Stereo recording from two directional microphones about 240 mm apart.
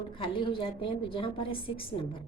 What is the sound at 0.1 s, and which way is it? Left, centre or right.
A woman's voice, left.